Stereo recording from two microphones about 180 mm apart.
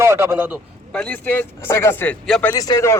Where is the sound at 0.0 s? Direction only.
15° right (ahead or behind).